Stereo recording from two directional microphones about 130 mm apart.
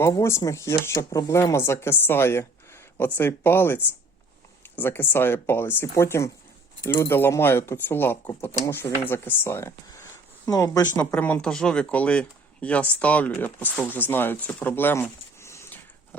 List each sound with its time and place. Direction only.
0.2 s speech: 20° left (ahead or behind)
4.8 s speech: 15° left (ahead or behind)
10.9 s speech: 10° left (ahead or behind)